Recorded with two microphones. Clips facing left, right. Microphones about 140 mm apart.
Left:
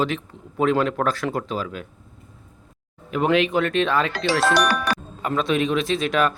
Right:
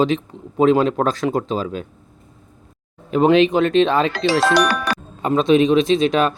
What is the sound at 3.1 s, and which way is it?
Speech, 25° right (ahead or behind).